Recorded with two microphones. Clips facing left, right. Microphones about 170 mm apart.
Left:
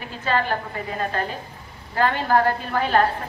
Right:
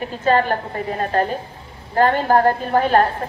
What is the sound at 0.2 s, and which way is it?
A woman's voice, 45° right (ahead or behind).